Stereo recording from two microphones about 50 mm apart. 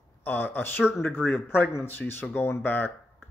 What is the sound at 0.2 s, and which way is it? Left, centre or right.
A man's voice, left.